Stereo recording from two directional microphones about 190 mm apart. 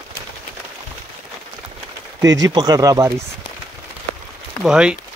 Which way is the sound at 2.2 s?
20° right (ahead or behind).